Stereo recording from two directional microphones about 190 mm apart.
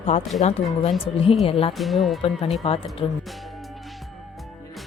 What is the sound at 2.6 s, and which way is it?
Speech, 30° left (ahead or behind).